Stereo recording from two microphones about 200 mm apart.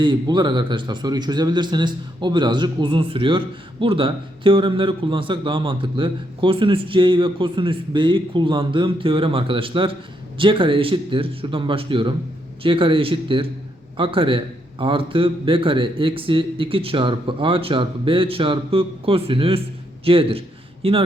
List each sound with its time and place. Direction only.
0.0 s a man's voice: 25° right (ahead or behind)